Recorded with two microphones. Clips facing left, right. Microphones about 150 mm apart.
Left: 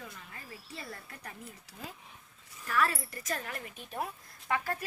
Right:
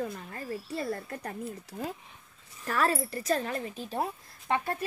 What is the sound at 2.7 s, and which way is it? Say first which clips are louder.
A woman's voice: right 3 dB; 35° right (ahead or behind).